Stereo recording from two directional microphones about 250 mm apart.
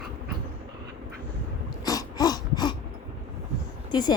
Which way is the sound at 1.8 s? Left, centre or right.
Centre.